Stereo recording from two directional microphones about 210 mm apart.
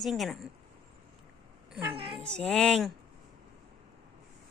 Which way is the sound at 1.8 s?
25° right (ahead or behind).